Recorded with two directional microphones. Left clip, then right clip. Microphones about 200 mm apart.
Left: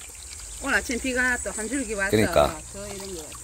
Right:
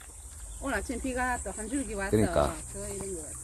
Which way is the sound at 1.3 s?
40° left (ahead or behind).